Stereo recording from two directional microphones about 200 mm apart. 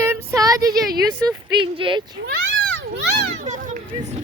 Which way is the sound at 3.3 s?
40° right (ahead or behind).